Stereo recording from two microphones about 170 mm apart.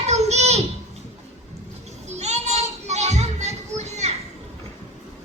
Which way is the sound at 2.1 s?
40° right (ahead or behind).